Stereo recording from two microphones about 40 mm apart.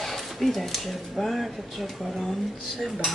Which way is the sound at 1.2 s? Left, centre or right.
Centre.